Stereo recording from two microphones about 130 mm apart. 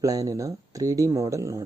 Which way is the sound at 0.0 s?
25° right (ahead or behind).